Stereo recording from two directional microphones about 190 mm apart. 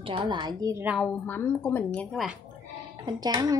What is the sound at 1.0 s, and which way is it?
A woman's voice, 10° left (ahead or behind).